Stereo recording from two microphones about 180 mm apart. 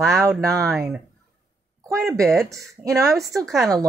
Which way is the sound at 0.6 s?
Centre (ahead or behind).